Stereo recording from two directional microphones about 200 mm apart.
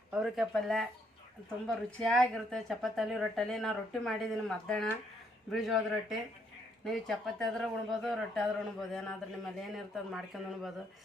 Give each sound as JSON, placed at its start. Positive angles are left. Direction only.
{"t": 0.1, "sound": "speech", "side_deg": 0}